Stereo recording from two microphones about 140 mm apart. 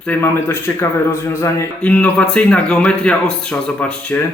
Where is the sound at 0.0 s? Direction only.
15° left (ahead or behind).